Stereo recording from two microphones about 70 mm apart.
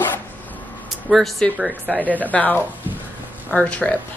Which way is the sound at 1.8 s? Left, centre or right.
Left.